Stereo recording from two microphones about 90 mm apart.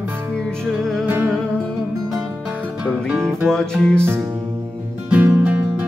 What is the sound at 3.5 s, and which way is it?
Music, 5° left (ahead or behind).